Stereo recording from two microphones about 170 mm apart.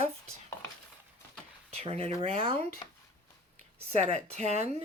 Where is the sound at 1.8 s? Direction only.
35° right (ahead or behind).